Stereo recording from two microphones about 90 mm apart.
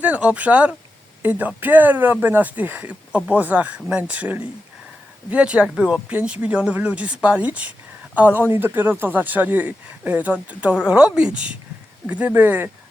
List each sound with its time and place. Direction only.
0.0 s speech: 15° right (ahead or behind)